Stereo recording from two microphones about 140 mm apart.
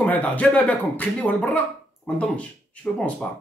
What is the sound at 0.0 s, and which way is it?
A man's voice, 10° left (ahead or behind).